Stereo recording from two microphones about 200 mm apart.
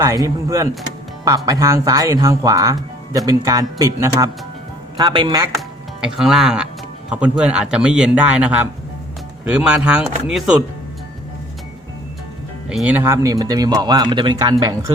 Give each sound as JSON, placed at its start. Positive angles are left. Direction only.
{"t": 0.0, "sound": "speech", "side_deg": -15}
{"t": 5.5, "sound": "a man's voice", "side_deg": 0}
{"t": 12.6, "sound": "speech", "side_deg": -5}